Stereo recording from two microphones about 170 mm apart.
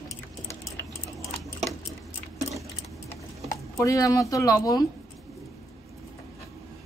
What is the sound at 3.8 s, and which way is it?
Speech, 20° left (ahead or behind).